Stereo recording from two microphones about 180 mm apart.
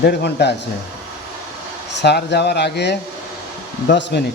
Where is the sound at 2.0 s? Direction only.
70° left (ahead or behind).